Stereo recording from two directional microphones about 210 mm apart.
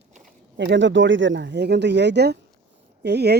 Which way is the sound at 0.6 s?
60° right (ahead or behind).